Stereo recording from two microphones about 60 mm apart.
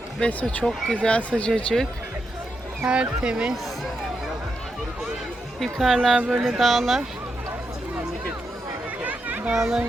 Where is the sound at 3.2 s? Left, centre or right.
Centre.